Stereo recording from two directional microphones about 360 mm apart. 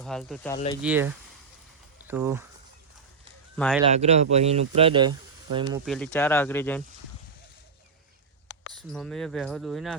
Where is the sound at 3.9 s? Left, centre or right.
Centre.